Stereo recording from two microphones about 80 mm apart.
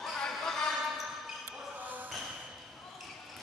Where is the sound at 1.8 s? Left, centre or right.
Right.